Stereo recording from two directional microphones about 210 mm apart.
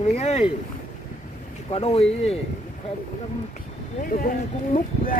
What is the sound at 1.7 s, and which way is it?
Speech, 30° left (ahead or behind).